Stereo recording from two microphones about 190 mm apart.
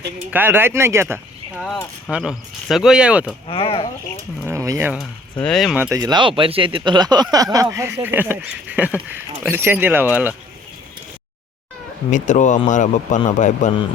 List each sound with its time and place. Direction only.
0.3 s speech: 10° right (ahead or behind)
1.6 s speech: centre (ahead or behind)
3.4 s speech: 30° left (ahead or behind)
4.4 s speech: 15° right (ahead or behind)
5.4 s speech: centre (ahead or behind)
6.0 s speech: 25° right (ahead or behind)
12.1 s speech: 40° left (ahead or behind)